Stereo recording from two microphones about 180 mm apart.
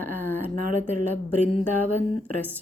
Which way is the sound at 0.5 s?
45° right (ahead or behind).